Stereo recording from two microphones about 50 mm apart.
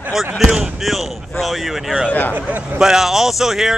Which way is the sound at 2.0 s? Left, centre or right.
Left.